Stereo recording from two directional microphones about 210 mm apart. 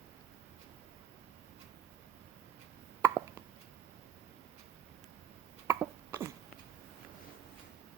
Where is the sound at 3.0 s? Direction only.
10° right (ahead or behind).